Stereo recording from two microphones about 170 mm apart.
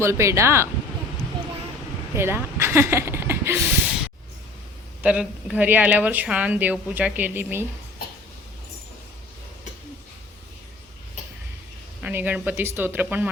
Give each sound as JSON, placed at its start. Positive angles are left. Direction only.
{"t": 0.0, "sound": "speech", "side_deg": -15}
{"t": 2.1, "sound": "speech", "side_deg": -15}
{"t": 5.0, "sound": "speech", "side_deg": -10}
{"t": 12.0, "sound": "speech", "side_deg": -10}